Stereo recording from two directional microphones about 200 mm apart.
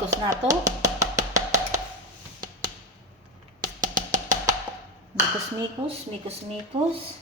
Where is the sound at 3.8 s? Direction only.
40° right (ahead or behind).